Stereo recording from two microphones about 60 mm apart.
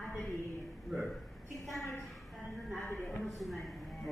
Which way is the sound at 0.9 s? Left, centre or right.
Centre.